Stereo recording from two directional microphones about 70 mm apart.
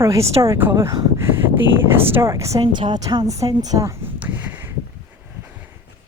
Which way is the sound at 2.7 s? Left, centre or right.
Right.